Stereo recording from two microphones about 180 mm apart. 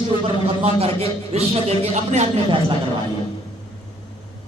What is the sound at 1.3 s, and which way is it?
A man's voice, 35° right (ahead or behind).